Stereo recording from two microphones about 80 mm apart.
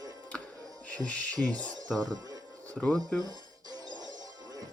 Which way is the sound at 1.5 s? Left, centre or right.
Right.